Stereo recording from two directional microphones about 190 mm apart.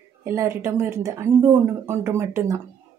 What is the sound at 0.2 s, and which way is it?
Speech, 15° right (ahead or behind).